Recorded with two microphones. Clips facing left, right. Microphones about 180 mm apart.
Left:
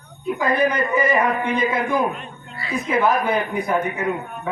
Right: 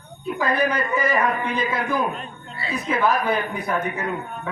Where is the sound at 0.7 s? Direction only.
20° left (ahead or behind).